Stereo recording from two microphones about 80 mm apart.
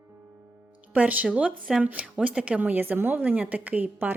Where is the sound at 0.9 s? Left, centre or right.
Centre.